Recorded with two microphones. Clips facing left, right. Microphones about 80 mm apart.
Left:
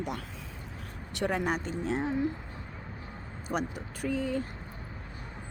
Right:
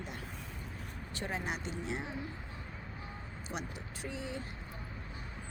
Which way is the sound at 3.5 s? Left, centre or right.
Left.